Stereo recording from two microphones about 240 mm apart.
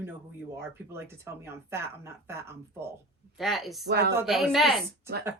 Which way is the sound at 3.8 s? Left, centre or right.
Right.